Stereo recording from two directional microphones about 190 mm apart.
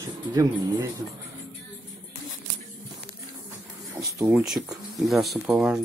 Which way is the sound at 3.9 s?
15° right (ahead or behind).